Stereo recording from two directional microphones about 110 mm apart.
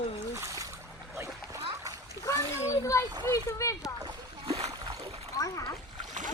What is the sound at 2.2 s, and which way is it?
A child's voice, 30° left (ahead or behind).